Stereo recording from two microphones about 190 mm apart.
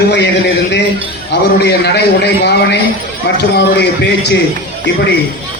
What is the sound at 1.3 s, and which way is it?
A man's voice, 60° left (ahead or behind).